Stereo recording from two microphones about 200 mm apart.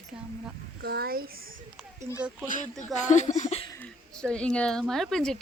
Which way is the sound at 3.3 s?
35° left (ahead or behind).